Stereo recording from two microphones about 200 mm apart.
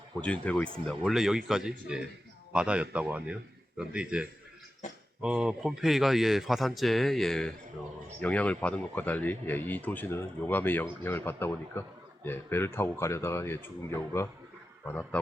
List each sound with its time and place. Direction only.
0.2 s a man's voice: 5° left (ahead or behind)